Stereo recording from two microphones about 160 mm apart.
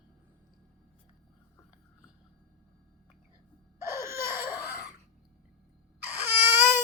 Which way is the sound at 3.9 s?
15° right (ahead or behind).